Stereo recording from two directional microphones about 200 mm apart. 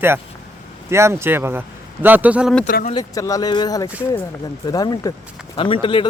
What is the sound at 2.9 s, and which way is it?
Speech, 20° left (ahead or behind).